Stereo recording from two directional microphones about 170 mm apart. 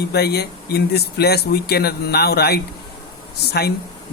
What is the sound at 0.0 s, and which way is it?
Speech, 70° left (ahead or behind).